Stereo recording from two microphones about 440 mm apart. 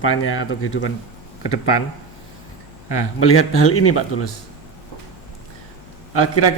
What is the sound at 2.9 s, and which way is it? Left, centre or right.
Speech, left.